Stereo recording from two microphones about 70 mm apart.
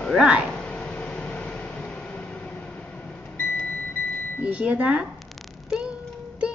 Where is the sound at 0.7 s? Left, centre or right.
Centre.